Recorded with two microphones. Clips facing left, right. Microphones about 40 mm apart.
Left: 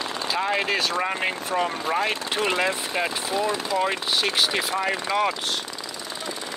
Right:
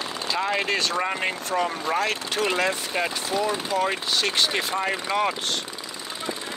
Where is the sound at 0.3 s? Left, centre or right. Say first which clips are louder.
Even; centre.